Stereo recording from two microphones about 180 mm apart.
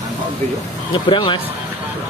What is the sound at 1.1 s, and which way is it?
Speech, 25° left (ahead or behind).